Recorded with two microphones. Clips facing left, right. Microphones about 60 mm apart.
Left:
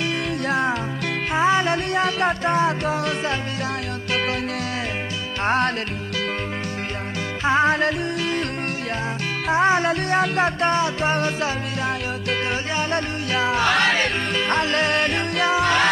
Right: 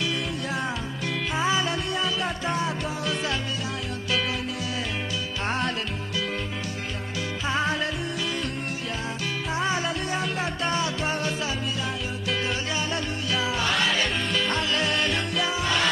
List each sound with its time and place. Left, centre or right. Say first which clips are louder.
1.4 s music: left 7 dB; left
7.4 s music: left 8 dB; left
9.5 s music: left 9 dB; left
10.7 s music: left 6 dB; left